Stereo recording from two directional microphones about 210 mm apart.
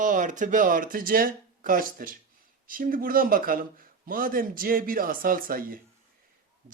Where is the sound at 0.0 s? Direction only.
35° right (ahead or behind).